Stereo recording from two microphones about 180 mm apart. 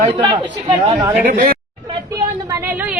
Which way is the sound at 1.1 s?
50° right (ahead or behind).